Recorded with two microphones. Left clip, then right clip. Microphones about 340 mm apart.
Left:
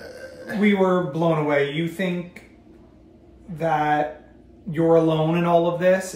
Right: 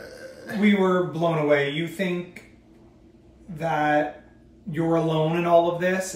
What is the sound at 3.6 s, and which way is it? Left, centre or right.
Speech, centre.